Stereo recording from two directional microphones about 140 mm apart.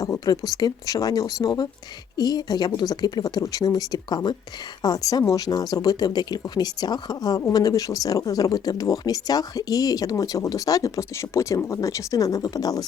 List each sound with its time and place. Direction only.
0.0 s speech: 25° left (ahead or behind)